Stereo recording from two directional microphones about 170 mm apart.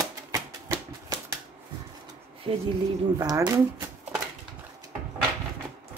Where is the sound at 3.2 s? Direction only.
20° right (ahead or behind).